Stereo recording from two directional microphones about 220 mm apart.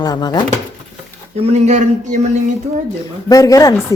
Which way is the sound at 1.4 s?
30° right (ahead or behind).